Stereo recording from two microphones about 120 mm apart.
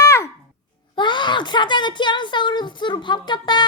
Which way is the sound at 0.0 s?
25° left (ahead or behind).